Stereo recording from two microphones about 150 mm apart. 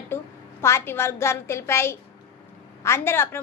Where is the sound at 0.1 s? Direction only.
15° left (ahead or behind).